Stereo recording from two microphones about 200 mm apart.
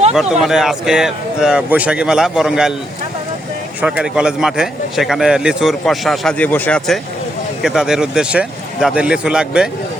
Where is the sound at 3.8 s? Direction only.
5° right (ahead or behind).